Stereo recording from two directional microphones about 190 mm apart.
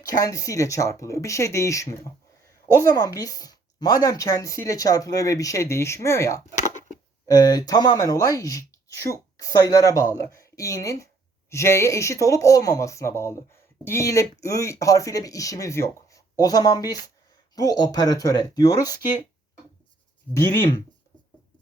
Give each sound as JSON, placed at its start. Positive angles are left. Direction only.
{"t": 0.0, "sound": "speech", "side_deg": 20}
{"t": 6.6, "sound": "a sound", "side_deg": 40}
{"t": 7.3, "sound": "speech", "side_deg": 20}
{"t": 20.3, "sound": "speech", "side_deg": 15}